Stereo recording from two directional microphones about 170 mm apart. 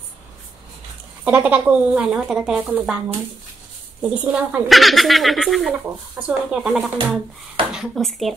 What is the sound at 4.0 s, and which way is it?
A child's voice, 10° right (ahead or behind).